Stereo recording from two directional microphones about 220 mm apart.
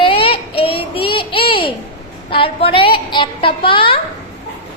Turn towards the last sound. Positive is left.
turn(degrees=25)  # may be behind; listen again after turning